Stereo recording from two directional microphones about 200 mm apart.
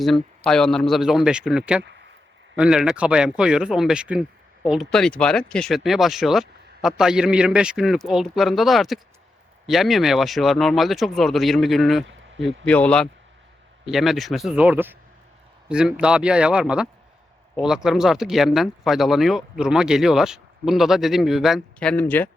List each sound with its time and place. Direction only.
0.0 s speech: centre (ahead or behind)
1.8 s a sound: 60° right (ahead or behind)
2.6 s speech: 5° right (ahead or behind)